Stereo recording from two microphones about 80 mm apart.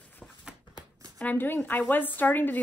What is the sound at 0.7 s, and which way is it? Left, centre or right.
Shuffling cards, right.